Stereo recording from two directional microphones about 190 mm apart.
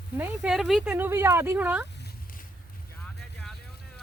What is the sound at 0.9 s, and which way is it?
Speech, 10° right (ahead or behind).